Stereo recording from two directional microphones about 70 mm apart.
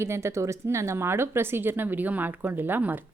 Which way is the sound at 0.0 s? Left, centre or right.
Right.